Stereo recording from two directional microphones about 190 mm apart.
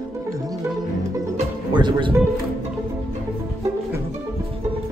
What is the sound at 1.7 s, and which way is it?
Music, 25° right (ahead or behind).